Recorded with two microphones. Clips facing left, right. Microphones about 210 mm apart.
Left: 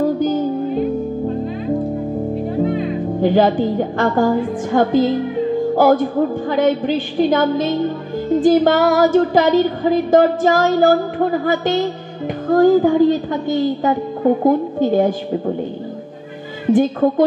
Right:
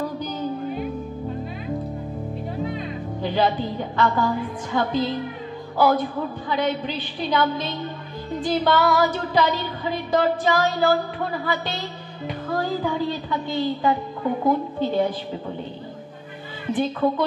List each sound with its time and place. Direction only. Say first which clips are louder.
0.0 s music: left 11 dB; 50° left (ahead or behind)
2.6 s a woman's voice: left 10 dB; 50° left (ahead or behind)
16.7 s a woman's voice: left 8 dB; 45° left (ahead or behind)